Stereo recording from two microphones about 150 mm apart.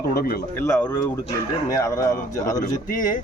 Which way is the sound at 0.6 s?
15° left (ahead or behind).